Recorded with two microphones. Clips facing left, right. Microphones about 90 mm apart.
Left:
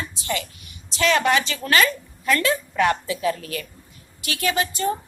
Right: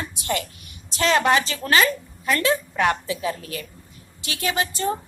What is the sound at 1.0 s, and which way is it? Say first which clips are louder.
Speech: even; 30° right (ahead or behind).